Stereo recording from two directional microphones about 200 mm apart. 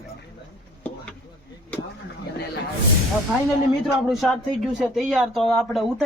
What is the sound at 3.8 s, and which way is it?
Speech, centre (ahead or behind).